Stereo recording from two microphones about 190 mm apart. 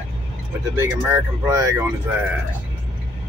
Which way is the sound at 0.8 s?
15° right (ahead or behind).